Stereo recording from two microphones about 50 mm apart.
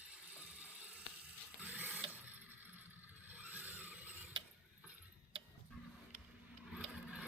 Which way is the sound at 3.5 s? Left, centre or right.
Right.